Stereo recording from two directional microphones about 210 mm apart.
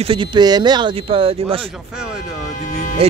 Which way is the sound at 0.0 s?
25° right (ahead or behind).